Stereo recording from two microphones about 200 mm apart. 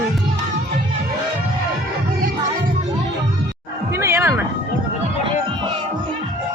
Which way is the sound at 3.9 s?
10° right (ahead or behind).